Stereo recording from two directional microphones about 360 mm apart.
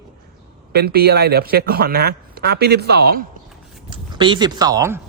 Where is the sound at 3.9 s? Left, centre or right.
Centre.